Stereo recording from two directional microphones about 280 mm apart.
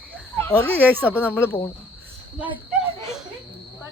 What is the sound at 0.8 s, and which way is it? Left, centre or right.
Speech, centre.